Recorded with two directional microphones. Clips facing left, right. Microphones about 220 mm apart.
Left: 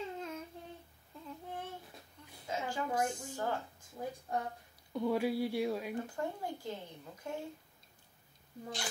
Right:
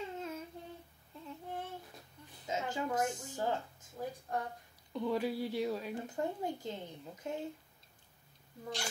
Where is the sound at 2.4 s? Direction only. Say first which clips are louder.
Right 1 dB; 20° right (ahead or behind).